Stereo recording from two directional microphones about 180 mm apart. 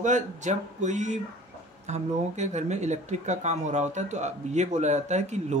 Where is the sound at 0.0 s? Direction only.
40° right (ahead or behind).